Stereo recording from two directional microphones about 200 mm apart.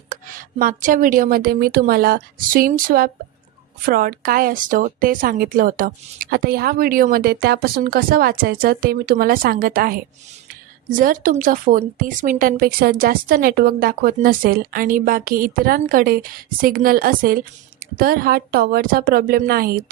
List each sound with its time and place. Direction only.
0.1 s speech: 45° right (ahead or behind)